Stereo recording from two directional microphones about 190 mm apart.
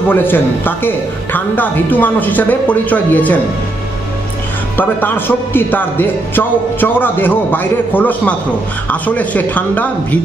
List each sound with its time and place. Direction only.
0.1 s a man's voice: 10° left (ahead or behind)
4.7 s a man's voice: 10° left (ahead or behind)